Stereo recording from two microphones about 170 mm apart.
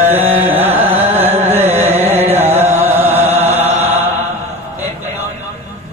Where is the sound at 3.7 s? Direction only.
40° right (ahead or behind).